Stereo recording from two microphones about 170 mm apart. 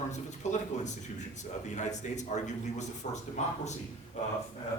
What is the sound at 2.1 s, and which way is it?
A man's voice, 45° left (ahead or behind).